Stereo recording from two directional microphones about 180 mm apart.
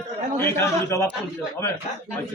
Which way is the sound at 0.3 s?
10° left (ahead or behind).